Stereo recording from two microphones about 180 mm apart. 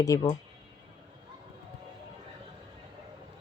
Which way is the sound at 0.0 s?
20° left (ahead or behind).